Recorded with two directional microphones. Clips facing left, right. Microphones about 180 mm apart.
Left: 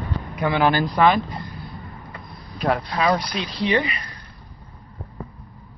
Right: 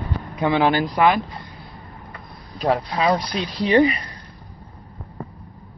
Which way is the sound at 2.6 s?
30° right (ahead or behind).